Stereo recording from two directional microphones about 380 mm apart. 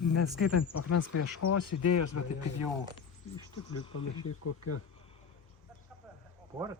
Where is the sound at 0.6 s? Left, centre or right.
Left.